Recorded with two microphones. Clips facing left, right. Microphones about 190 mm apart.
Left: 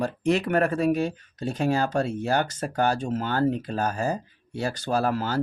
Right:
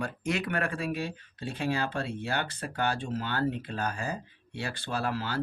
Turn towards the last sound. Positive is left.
turn(degrees=45)  # may be behind; listen again after turning